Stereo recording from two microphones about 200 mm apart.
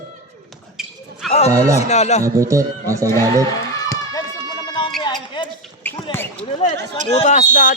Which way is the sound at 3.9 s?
20° left (ahead or behind).